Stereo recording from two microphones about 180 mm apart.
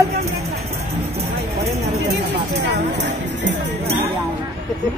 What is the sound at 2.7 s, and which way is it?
Music, 75° right (ahead or behind).